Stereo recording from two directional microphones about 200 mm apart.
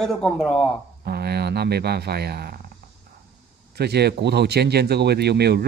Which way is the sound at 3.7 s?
55° right (ahead or behind).